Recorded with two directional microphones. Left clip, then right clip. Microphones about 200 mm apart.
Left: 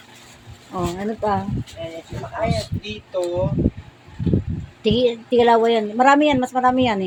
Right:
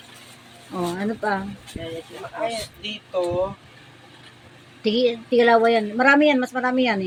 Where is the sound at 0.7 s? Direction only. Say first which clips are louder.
Left 1 dB; 10° left (ahead or behind).